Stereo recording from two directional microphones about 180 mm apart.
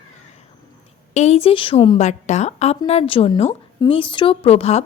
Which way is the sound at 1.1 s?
35° left (ahead or behind).